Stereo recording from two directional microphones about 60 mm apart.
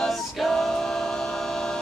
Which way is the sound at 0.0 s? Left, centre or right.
Centre.